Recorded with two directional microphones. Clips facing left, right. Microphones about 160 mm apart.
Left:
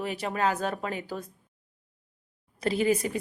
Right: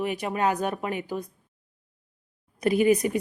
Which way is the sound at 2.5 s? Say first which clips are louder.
Right 4 dB; 15° right (ahead or behind).